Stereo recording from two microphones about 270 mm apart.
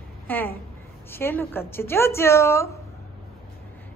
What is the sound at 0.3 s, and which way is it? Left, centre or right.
A woman's voice, centre.